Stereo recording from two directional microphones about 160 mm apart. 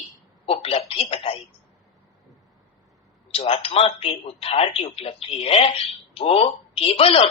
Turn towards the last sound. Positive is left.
turn(degrees=35)  # may be behind; listen again after turning